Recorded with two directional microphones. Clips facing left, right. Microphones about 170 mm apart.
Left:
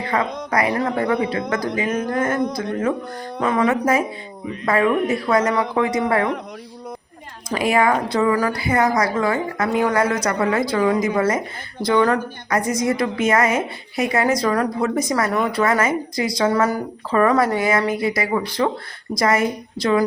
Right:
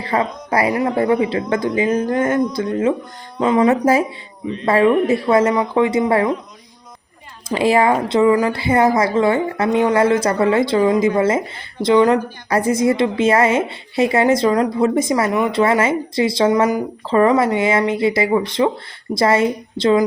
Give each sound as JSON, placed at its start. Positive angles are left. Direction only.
{"t": 0.0, "sound": "a sound", "side_deg": -30}
{"t": 0.9, "sound": "a woman's voice", "side_deg": -30}
{"t": 3.4, "sound": "a woman's voice", "side_deg": -20}
{"t": 7.5, "sound": "a woman's voice", "side_deg": -30}
{"t": 10.8, "sound": "speech", "side_deg": -15}
{"t": 11.2, "sound": "a woman's voice", "side_deg": -25}
{"t": 12.5, "sound": "a woman's voice", "side_deg": -30}